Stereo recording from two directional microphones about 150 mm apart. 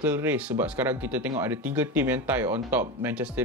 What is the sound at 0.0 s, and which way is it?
Speech, 10° right (ahead or behind).